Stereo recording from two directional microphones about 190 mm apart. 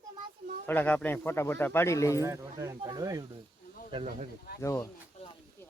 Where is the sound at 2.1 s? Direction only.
15° right (ahead or behind).